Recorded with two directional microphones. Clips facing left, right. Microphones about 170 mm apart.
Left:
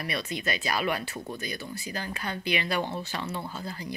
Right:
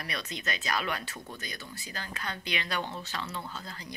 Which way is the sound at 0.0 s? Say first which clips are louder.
Left 5 dB; 10° left (ahead or behind).